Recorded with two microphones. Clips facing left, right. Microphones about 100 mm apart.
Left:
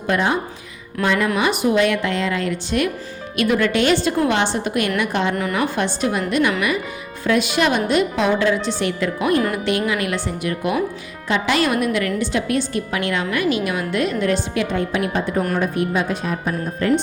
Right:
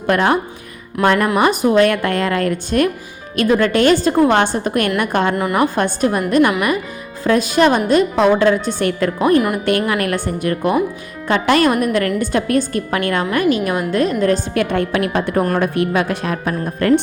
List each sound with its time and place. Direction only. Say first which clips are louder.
0.1 s a woman's voice: right 4 dB; 65° right (ahead or behind)
1.4 s a woman's voice: right 6 dB; 45° right (ahead or behind)
5.3 s a woman's voice: right 4 dB; 20° right (ahead or behind)
5.5 s a woman's voice: right 5 dB; 45° right (ahead or behind)
9.1 s a woman's voice: right 6 dB; 35° right (ahead or behind)
9.6 s a woman's voice: right 4 dB; 50° right (ahead or behind)
14.6 s a woman's voice: right 4 dB; 65° right (ahead or behind)